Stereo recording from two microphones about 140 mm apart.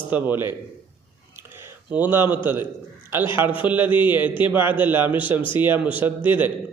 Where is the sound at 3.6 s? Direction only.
15° right (ahead or behind).